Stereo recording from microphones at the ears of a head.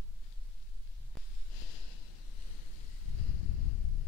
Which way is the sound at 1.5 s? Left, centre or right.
Left.